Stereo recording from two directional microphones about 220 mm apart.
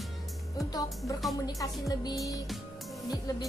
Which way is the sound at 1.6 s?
15° left (ahead or behind).